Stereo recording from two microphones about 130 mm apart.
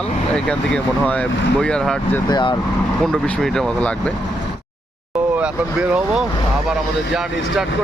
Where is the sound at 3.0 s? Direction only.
5° left (ahead or behind).